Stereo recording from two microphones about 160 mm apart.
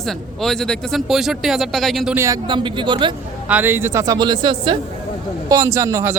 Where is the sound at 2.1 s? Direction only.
20° right (ahead or behind).